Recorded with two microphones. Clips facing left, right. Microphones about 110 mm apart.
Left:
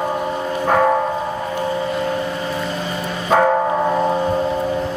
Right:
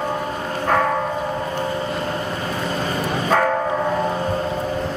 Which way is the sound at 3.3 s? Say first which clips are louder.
Left 4 dB; 15° left (ahead or behind).